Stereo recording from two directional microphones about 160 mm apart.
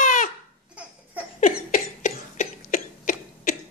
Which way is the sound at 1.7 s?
55° left (ahead or behind).